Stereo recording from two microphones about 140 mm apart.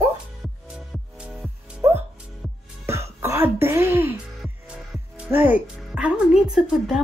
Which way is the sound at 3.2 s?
15° right (ahead or behind).